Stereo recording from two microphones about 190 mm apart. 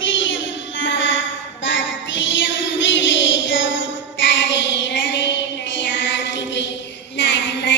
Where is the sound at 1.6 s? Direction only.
75° left (ahead or behind).